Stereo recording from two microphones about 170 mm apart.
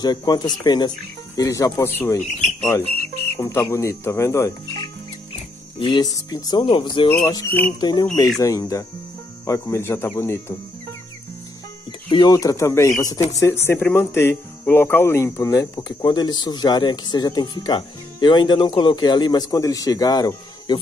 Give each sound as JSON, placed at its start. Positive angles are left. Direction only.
{"t": 0.0, "sound": "speech", "side_deg": 25}
{"t": 3.3, "sound": "speech", "side_deg": 15}
{"t": 5.8, "sound": "speech", "side_deg": 30}
{"t": 12.1, "sound": "speech", "side_deg": 25}